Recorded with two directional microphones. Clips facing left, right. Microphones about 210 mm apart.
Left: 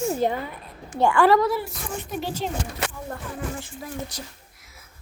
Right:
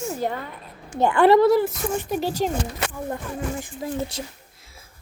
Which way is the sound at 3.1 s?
20° right (ahead or behind).